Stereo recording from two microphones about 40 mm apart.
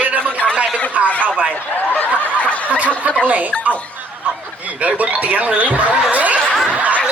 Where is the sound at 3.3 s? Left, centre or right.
Right.